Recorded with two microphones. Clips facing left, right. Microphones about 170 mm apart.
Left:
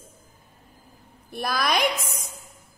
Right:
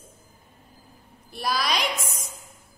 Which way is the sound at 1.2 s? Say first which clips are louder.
Left 1 dB; 55° left (ahead or behind).